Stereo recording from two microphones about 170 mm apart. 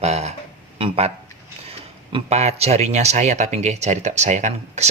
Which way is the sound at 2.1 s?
40° right (ahead or behind).